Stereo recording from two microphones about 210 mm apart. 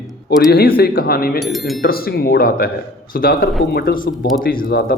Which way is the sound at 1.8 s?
45° left (ahead or behind).